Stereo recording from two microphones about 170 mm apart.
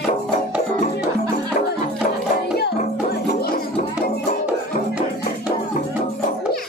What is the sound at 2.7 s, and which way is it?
Music, 60° left (ahead or behind).